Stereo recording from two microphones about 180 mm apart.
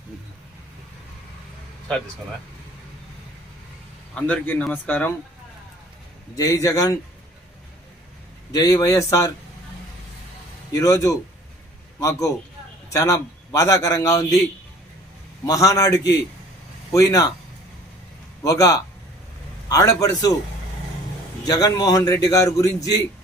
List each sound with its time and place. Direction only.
4.1 s speech: 5° left (ahead or behind)
6.3 s a man's voice: 20° left (ahead or behind)
8.5 s a man's voice: 20° left (ahead or behind)
10.8 s a man's voice: 20° left (ahead or behind)
15.4 s a man's voice: 20° left (ahead or behind)
18.4 s a man's voice: 20° left (ahead or behind)
21.4 s a man's voice: 20° left (ahead or behind)